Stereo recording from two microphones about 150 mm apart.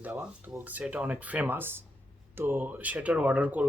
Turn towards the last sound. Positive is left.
turn(degrees=-10)  # may be behind; listen again after turning